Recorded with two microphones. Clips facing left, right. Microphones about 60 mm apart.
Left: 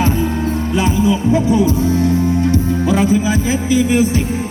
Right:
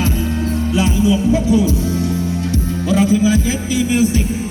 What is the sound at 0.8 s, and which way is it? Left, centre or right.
Music, left.